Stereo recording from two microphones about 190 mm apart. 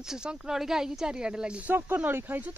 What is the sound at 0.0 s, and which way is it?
Speech, 5° right (ahead or behind).